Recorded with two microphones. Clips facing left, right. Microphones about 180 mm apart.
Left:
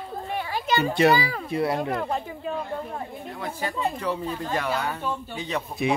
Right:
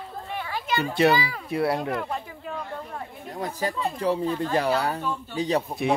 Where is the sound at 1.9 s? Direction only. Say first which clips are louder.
Left 2 dB; 35° left (ahead or behind).